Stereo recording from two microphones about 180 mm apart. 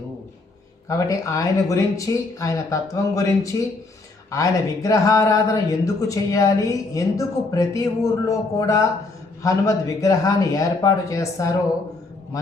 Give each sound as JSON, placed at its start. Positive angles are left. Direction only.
{"t": 0.9, "sound": "speech", "side_deg": 20}